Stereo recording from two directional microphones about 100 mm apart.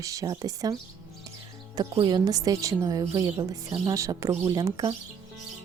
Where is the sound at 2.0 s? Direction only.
40° right (ahead or behind).